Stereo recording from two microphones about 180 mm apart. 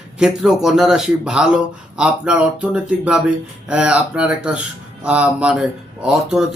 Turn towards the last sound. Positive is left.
turn(degrees=-5)  # may be behind; listen again after turning